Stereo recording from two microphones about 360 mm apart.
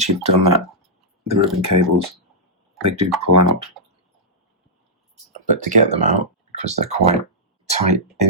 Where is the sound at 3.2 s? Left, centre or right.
Right.